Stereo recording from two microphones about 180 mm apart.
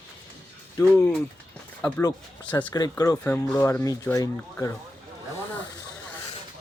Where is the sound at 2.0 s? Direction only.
20° left (ahead or behind).